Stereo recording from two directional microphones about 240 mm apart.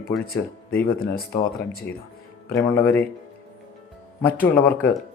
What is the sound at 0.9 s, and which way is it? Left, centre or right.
Speech, left.